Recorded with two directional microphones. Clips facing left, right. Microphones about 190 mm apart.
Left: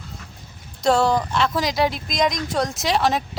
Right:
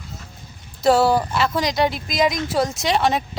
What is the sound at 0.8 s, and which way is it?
Speech, 5° right (ahead or behind).